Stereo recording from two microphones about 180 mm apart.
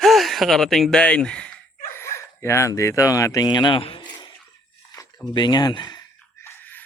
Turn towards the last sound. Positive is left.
turn(degrees=10)  # may be behind; listen again after turning